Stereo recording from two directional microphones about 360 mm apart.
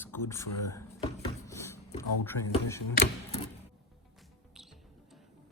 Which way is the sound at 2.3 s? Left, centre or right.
Left.